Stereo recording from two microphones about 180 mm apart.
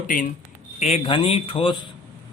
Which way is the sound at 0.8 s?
30° left (ahead or behind).